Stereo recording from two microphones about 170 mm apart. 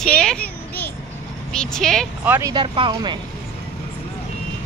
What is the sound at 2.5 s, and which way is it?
Speech, 30° right (ahead or behind).